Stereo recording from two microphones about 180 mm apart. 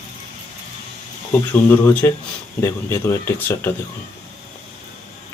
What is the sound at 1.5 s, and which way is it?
Speech, 15° left (ahead or behind).